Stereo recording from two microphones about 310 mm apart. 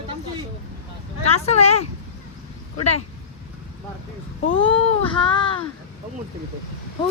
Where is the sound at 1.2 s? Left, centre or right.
Centre.